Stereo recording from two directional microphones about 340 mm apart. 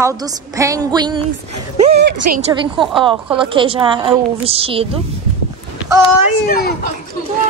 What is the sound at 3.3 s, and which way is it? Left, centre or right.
Speech, centre.